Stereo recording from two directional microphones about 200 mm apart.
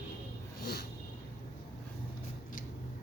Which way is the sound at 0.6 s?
50° left (ahead or behind).